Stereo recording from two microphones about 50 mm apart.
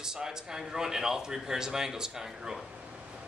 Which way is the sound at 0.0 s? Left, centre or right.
Centre.